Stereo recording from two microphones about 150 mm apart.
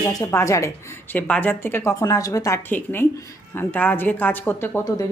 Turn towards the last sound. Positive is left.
turn(degrees=10)  # may be behind; listen again after turning